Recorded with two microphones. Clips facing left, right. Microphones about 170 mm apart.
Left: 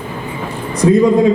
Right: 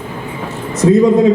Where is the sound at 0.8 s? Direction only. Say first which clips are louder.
Right 1 dB; 20° right (ahead or behind).